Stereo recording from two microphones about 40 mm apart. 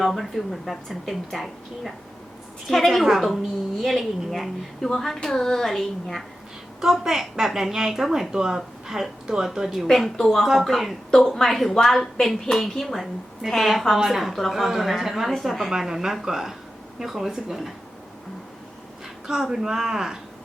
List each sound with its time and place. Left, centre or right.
0.0 s a woman's voice: centre
4.9 s a woman's voice: centre
6.8 s a woman's voice: centre
9.8 s a woman's voice: centre
15.7 s a woman's voice: centre
19.3 s a woman's voice: centre